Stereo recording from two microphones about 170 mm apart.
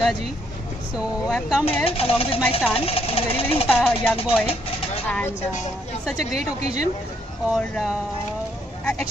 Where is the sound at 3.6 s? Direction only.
10° left (ahead or behind).